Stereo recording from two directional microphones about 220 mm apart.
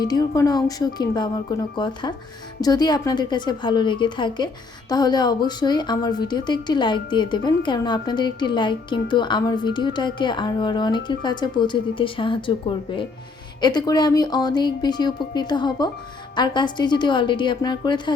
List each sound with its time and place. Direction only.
0.0 s a woman's voice: 15° left (ahead or behind)